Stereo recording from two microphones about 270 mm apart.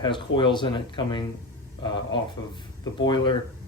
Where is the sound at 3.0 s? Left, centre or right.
Centre.